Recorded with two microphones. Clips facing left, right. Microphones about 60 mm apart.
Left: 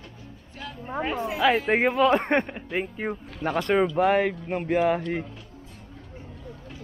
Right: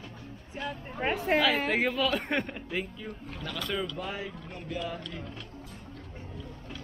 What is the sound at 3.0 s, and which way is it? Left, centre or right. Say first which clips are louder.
Speech: left 10 dB; left.